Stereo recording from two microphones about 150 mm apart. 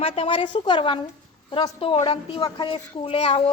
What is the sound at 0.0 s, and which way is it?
A woman's voice, 35° left (ahead or behind).